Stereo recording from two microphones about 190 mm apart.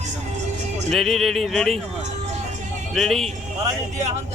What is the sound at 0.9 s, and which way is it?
Speech, centre (ahead or behind).